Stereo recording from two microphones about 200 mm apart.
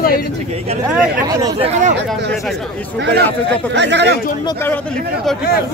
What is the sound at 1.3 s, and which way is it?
Speech, 20° right (ahead or behind).